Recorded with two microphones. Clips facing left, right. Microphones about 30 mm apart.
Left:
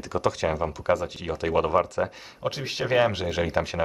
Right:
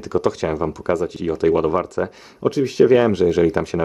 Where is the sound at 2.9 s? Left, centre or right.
Centre.